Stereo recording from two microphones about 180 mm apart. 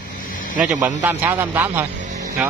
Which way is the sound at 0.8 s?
10° right (ahead or behind).